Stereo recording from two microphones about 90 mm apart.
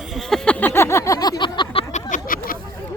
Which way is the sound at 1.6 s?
65° left (ahead or behind).